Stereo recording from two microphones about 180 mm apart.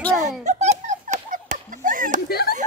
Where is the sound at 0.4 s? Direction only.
40° right (ahead or behind).